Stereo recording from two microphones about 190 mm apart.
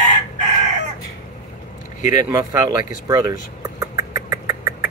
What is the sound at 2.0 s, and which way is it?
Speech, 40° left (ahead or behind).